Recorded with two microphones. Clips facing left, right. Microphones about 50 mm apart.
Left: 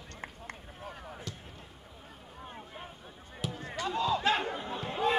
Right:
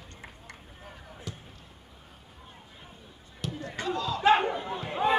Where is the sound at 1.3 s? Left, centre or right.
Centre.